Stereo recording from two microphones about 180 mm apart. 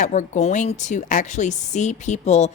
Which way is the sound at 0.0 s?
45° left (ahead or behind).